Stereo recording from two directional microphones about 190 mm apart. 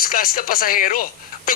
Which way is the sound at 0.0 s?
50° left (ahead or behind).